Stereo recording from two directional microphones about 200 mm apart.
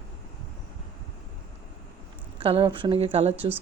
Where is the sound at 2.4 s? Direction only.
25° right (ahead or behind).